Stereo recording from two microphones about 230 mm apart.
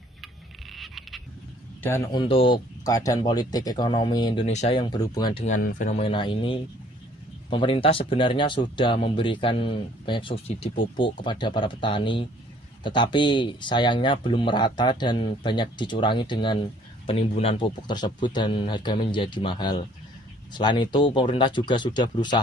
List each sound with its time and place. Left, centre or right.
0.7 s frog: centre
1.8 s a man's voice: centre
2.2 s speech: left
5.5 s speech: left